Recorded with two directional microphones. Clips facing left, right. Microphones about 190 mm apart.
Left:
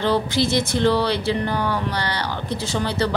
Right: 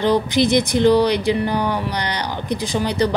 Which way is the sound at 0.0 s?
15° right (ahead or behind).